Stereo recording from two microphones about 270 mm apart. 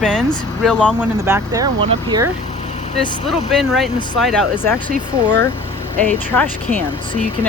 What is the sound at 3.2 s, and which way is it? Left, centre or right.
Speech, centre.